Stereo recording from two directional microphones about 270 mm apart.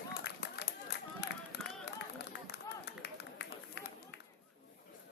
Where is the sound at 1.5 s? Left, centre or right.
Left.